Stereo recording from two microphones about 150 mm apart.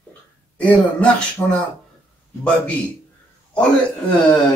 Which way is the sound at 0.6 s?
10° left (ahead or behind).